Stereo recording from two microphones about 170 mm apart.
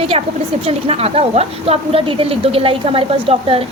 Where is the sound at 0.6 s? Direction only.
35° right (ahead or behind).